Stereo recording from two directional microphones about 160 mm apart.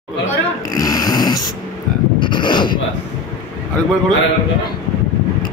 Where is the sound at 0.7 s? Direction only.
25° left (ahead or behind).